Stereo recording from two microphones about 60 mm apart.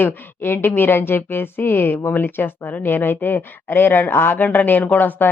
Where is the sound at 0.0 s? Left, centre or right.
Left.